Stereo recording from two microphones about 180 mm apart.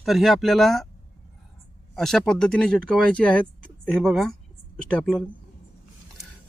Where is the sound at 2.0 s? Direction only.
Centre (ahead or behind).